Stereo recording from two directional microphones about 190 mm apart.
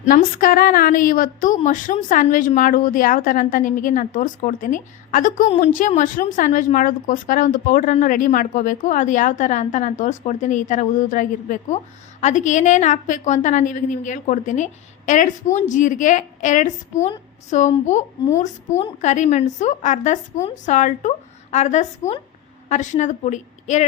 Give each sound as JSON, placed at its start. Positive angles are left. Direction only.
{"t": 0.0, "sound": "a woman's voice", "side_deg": 50}